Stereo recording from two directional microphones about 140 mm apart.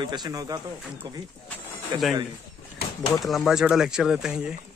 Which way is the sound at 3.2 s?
Centre (ahead or behind).